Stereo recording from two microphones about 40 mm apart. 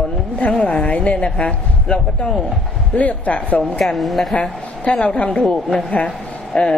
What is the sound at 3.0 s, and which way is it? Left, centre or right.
Speech, left.